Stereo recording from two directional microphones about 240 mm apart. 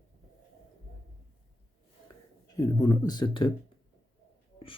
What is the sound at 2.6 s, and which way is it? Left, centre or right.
Speech, centre.